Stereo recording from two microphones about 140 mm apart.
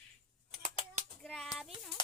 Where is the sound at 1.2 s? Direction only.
5° left (ahead or behind).